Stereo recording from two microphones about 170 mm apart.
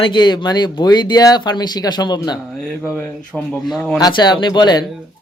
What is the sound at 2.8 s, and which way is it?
Speech, 10° left (ahead or behind).